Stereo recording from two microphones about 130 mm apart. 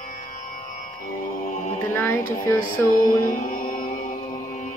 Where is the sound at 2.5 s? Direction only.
80° left.